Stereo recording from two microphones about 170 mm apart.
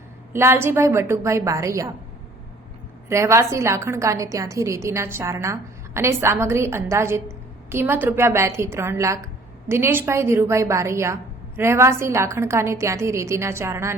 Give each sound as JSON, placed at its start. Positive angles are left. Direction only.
{"t": 0.3, "sound": "a woman's voice", "side_deg": -15}
{"t": 3.1, "sound": "a woman's voice", "side_deg": -15}